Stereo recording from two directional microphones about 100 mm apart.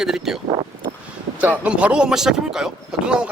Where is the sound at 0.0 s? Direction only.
5° right (ahead or behind).